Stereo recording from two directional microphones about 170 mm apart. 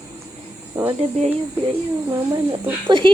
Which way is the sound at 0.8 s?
20° right (ahead or behind).